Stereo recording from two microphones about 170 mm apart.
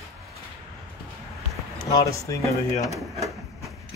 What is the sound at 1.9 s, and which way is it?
Speech, 20° left (ahead or behind).